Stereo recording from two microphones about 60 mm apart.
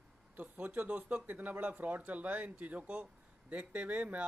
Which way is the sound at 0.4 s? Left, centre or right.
Right.